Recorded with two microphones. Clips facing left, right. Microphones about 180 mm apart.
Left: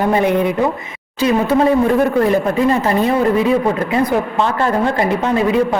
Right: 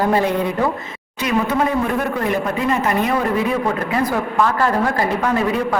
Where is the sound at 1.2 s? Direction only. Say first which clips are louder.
Left 5 dB; 30° left (ahead or behind).